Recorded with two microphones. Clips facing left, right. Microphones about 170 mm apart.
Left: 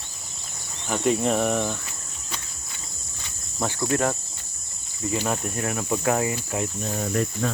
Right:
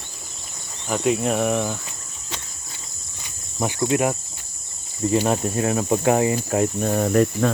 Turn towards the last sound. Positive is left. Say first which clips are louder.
# right 7 dB
turn(degrees=-60)  # may be behind; listen again after turning